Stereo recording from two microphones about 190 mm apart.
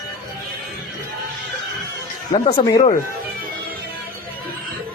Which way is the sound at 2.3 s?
30° left (ahead or behind).